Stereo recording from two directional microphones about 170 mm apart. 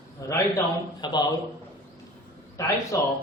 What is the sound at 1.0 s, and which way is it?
Speech, 25° left (ahead or behind).